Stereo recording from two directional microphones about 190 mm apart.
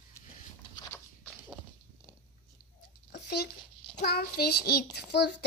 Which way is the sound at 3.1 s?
60° left (ahead or behind).